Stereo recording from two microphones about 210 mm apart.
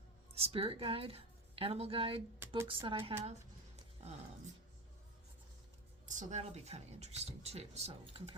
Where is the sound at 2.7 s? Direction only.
25° right (ahead or behind).